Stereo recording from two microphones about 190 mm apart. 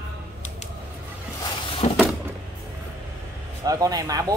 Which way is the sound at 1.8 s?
35° left (ahead or behind).